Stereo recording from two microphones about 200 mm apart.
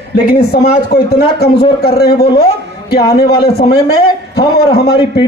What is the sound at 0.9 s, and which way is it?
A man's voice, 50° left (ahead or behind).